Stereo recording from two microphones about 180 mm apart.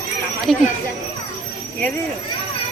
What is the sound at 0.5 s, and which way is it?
Speech, centre (ahead or behind).